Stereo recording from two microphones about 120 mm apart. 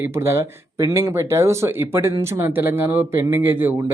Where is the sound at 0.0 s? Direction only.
20° right (ahead or behind).